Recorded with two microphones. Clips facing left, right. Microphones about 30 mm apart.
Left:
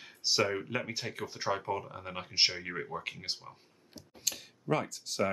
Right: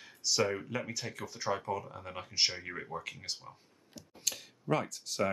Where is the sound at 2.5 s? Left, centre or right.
Centre.